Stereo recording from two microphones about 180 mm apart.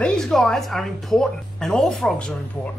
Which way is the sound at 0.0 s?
5° left (ahead or behind).